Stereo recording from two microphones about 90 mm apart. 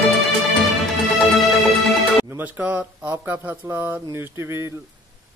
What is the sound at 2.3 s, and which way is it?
A man's voice, 20° right (ahead or behind).